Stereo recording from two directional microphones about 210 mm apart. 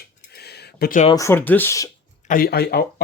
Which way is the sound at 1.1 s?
10° left (ahead or behind).